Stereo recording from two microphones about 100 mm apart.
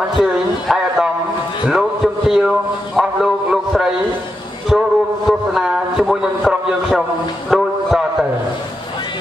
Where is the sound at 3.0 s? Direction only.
5° right (ahead or behind).